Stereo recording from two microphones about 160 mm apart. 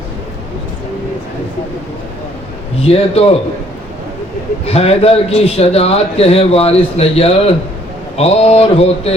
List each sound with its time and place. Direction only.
2.8 s a man's voice: 40° left (ahead or behind)
4.6 s a man's voice: 40° left (ahead or behind)